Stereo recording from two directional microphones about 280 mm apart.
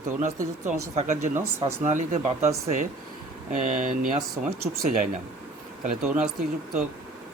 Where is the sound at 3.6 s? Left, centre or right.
Right.